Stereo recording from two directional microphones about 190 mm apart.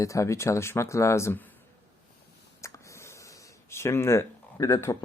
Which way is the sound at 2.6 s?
15° left (ahead or behind).